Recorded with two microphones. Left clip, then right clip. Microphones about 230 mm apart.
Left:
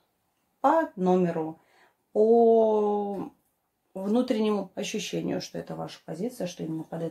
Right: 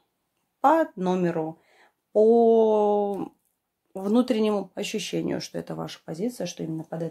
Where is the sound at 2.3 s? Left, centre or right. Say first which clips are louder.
Left 2 dB; right.